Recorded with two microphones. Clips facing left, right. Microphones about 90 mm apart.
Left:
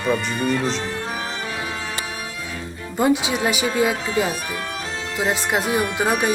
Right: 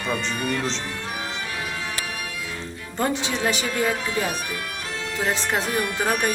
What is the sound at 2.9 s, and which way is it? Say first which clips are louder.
Speech: left 6 dB; 10° left (ahead or behind).